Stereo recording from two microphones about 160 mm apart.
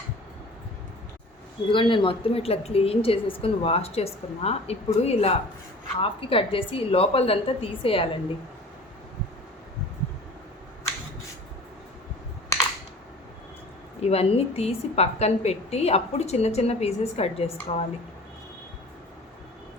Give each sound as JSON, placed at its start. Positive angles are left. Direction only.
{"t": 1.7, "sound": "a woman's voice", "side_deg": 30}
{"t": 14.0, "sound": "a woman's voice", "side_deg": 40}